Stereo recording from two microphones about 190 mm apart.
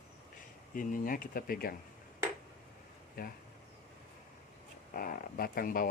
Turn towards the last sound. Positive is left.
turn(degrees=50)  # may be behind; listen again after turning